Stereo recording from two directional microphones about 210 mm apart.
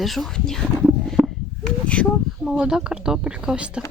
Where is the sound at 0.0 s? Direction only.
Centre (ahead or behind).